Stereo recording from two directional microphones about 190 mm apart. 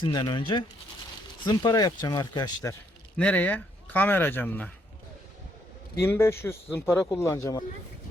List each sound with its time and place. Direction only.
0.0 s speech: 25° left (ahead or behind)
3.2 s speech: 10° left (ahead or behind)
6.0 s speech: 10° left (ahead or behind)